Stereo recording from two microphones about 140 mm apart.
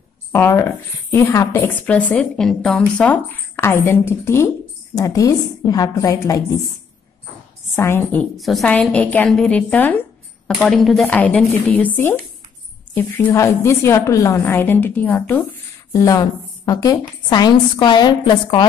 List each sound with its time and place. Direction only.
0.3 s a woman's voice: 20° left (ahead or behind)
7.7 s a woman's voice: 15° left (ahead or behind)
8.4 s a woman's voice: centre (ahead or behind)
15.9 s a woman's voice: 25° left (ahead or behind)